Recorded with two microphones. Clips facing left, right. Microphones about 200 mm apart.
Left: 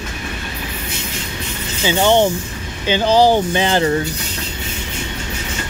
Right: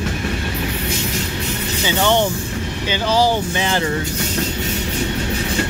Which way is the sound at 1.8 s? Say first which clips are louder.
Left 4 dB; 15° left (ahead or behind).